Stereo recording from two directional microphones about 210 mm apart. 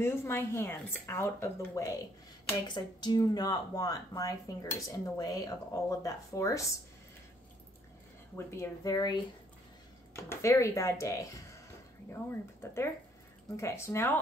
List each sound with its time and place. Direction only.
0.0 s speech: 10° left (ahead or behind)
8.4 s speech: 10° left (ahead or behind)
12.6 s speech: 10° left (ahead or behind)